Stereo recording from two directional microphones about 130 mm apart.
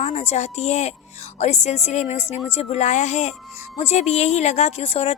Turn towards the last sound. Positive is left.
turn(degrees=50)  # may be behind; listen again after turning